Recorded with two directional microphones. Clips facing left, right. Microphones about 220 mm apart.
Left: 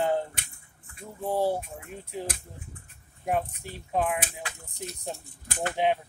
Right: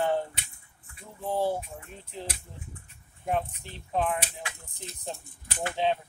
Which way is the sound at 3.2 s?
10° left (ahead or behind).